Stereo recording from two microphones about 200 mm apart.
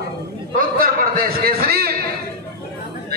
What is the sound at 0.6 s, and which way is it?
A man's voice, 45° right (ahead or behind).